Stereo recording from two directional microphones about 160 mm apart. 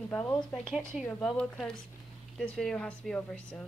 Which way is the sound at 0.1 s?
10° left (ahead or behind).